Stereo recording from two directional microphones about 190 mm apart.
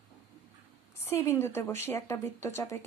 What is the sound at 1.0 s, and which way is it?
A woman's voice, 15° left (ahead or behind).